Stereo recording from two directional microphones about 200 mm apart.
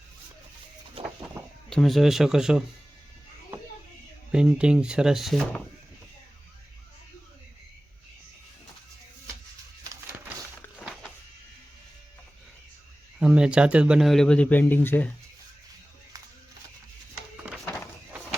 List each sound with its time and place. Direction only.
1.4 s chicken: 15° right (ahead or behind)
1.7 s speech: centre (ahead or behind)
4.3 s speech: 5° right (ahead or behind)
13.1 s speech: 5° right (ahead or behind)